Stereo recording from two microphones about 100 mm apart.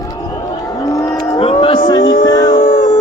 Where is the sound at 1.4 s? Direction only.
90° left.